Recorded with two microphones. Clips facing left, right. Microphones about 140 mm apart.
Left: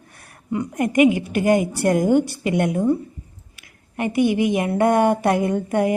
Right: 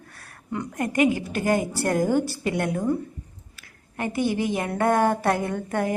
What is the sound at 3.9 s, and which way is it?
A woman's voice, 15° left (ahead or behind).